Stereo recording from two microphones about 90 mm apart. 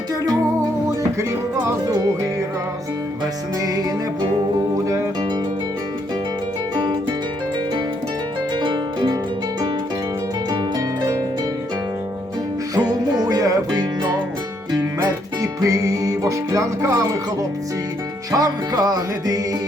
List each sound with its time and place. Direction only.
8.5 s harp: 60° right (ahead or behind)
10.5 s harp: 45° right (ahead or behind)
12.9 s music: 45° right (ahead or behind)
15.0 s music: 35° right (ahead or behind)
18.3 s music: 45° right (ahead or behind)